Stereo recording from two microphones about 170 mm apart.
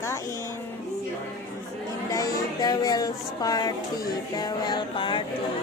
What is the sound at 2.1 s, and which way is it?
Speech, 20° left (ahead or behind).